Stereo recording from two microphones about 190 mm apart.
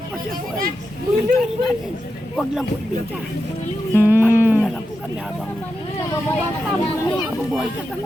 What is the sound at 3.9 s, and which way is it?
Music, 10° right (ahead or behind).